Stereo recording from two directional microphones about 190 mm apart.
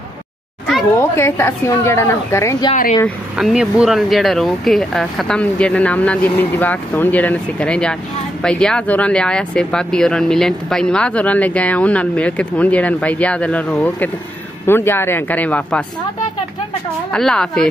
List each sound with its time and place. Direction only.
1.1 s speech: 15° left (ahead or behind)
2.7 s speech: 40° left (ahead or behind)
3.3 s speech: 5° right (ahead or behind)
17.1 s speech: 5° left (ahead or behind)